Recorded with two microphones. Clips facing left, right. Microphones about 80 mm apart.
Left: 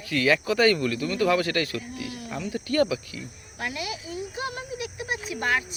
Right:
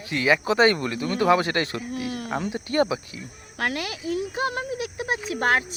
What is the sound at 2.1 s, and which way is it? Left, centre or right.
Cricket, right.